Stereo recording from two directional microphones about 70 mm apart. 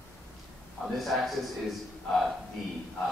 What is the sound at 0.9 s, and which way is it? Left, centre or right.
A man's voice, centre.